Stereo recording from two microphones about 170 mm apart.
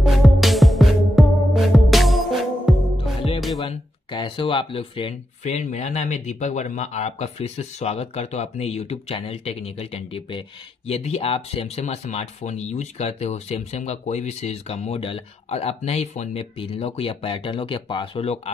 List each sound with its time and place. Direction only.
0.0 s music: centre (ahead or behind)
3.6 s speech: 30° left (ahead or behind)